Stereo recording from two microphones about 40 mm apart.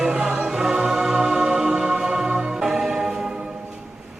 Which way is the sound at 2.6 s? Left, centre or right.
Centre.